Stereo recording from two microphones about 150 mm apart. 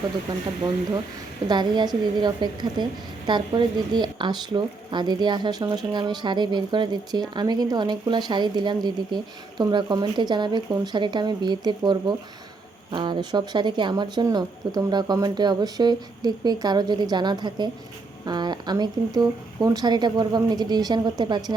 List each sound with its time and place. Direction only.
0.3 s a woman's voice: 30° right (ahead or behind)
1.5 s a woman's voice: 30° right (ahead or behind)